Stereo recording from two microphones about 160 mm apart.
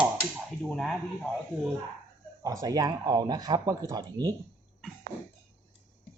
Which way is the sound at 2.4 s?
20° right (ahead or behind).